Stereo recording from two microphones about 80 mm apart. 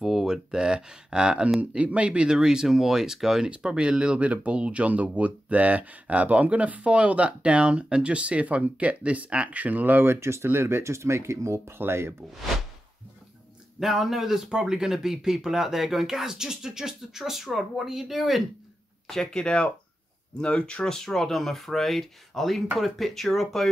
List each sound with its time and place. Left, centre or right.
0.0 s speech: centre; by 12.1 s right
13.7 s speech: centre
19.0 s speech: centre